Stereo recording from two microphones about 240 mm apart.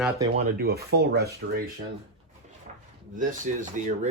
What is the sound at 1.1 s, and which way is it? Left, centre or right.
Speech, right.